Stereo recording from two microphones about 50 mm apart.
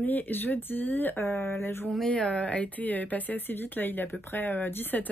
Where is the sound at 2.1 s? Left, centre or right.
Centre.